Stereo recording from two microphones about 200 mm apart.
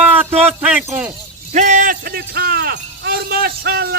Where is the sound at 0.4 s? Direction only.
5° right (ahead or behind).